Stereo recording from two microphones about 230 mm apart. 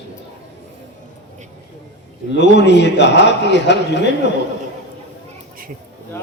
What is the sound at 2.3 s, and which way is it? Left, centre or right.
A man's voice, left.